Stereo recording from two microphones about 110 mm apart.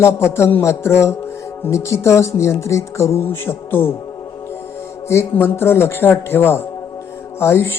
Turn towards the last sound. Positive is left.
turn(degrees=20)  # may be behind; listen again after turning